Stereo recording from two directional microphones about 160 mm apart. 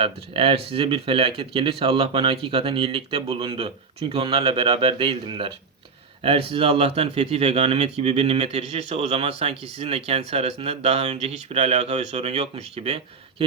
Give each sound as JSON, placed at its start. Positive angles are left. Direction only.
{"t": 0.0, "sound": "speech", "side_deg": -35}